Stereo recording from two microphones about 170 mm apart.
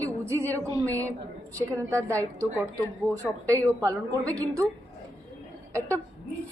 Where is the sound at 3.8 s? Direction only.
20° right (ahead or behind).